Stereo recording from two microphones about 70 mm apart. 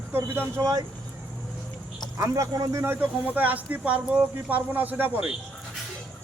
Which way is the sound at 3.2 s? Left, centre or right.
Right.